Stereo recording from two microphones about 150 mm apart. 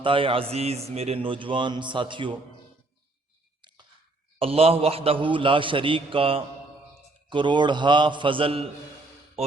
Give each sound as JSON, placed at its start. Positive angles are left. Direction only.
{"t": 0.0, "sound": "a man's voice", "side_deg": -35}
{"t": 4.4, "sound": "a man's voice", "side_deg": -40}